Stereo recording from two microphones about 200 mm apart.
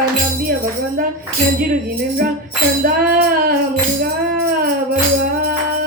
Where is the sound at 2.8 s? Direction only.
45° right (ahead or behind).